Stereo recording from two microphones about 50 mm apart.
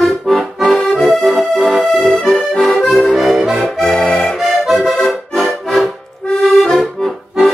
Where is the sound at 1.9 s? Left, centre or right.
Centre.